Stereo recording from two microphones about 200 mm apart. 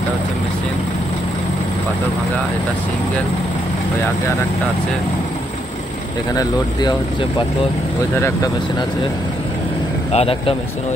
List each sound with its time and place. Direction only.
6.3 s speech: 20° left (ahead or behind)
10.1 s speech: 30° left (ahead or behind)